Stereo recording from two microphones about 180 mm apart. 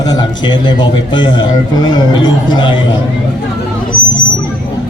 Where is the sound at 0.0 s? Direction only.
25° left (ahead or behind).